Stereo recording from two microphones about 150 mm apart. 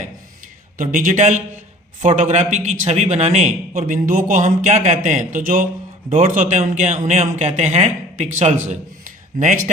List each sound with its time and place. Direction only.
0.8 s speech: 60° right (ahead or behind)